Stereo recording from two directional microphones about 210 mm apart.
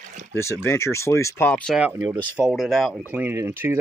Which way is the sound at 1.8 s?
10° right (ahead or behind).